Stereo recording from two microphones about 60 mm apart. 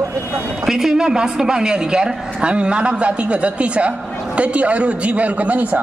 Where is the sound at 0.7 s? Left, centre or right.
Centre.